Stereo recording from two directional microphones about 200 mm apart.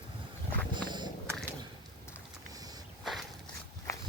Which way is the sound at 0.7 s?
20° right (ahead or behind).